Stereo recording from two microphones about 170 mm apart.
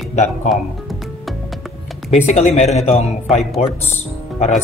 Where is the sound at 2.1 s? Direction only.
40° left (ahead or behind).